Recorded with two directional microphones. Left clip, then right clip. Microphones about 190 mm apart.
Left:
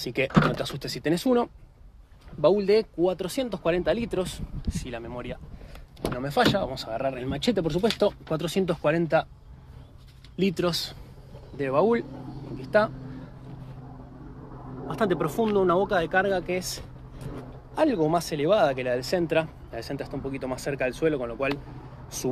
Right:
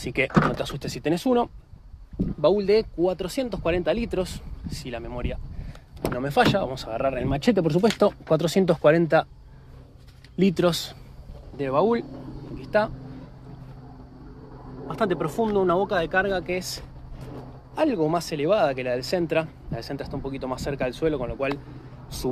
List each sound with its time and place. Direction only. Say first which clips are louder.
0.0 s speech: right 1 dB; centre (ahead or behind); by 9.3 s 40° right (ahead or behind)
10.3 s speech: right 4 dB; 50° right (ahead or behind)
11.5 s speech: right 1 dB; 10° right (ahead or behind)
12.5 s speech: even; 5° left (ahead or behind)
14.9 s speech: right 1 dB; centre (ahead or behind)